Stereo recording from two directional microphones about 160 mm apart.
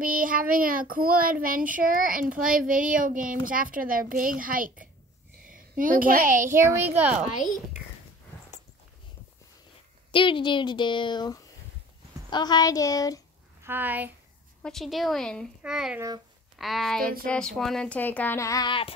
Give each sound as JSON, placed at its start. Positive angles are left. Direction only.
{"t": 0.0, "sound": "a child's voice", "side_deg": -60}
{"t": 6.5, "sound": "a child's voice", "side_deg": -15}
{"t": 7.3, "sound": "speech", "side_deg": 55}
{"t": 10.1, "sound": "a woman's voice", "side_deg": 30}
{"t": 13.6, "sound": "speech", "side_deg": -15}
{"t": 14.6, "sound": "a woman's voice", "side_deg": 0}
{"t": 17.3, "sound": "child singing", "side_deg": 5}